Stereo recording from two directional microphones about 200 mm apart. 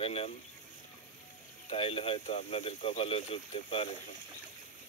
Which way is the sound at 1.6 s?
30° left (ahead or behind).